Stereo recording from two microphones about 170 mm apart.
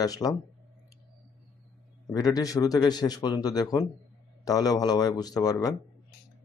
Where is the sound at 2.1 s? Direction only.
20° left (ahead or behind).